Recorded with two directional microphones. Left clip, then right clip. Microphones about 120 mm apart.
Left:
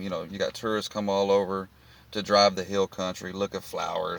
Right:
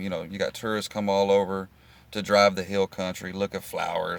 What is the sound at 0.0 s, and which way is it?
Speech, 35° right (ahead or behind).